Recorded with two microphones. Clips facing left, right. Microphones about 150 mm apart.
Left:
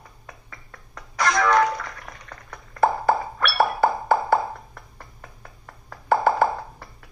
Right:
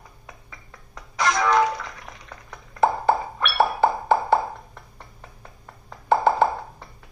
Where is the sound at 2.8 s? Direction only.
20° right (ahead or behind).